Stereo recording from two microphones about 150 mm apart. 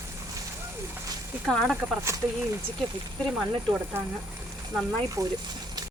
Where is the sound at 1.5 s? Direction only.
Centre (ahead or behind).